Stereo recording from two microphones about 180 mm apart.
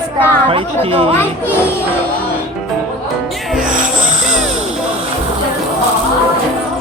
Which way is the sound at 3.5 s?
5° right (ahead or behind).